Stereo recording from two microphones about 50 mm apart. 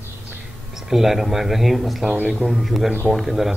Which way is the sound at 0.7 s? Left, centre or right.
Centre.